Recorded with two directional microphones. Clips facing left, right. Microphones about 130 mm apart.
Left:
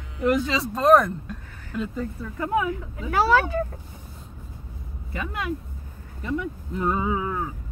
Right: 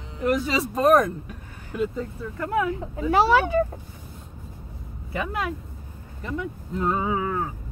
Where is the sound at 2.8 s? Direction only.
30° right (ahead or behind).